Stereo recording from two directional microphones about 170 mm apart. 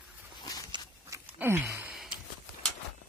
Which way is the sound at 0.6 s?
25° right (ahead or behind).